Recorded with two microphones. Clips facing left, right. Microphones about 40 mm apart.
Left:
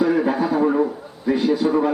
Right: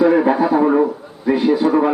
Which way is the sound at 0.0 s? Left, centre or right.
Right.